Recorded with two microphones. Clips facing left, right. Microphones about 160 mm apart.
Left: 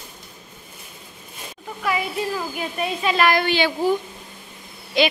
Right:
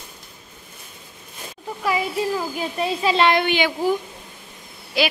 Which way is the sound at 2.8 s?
25° right (ahead or behind).